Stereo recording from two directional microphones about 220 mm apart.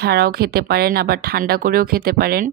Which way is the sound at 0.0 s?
45° right (ahead or behind).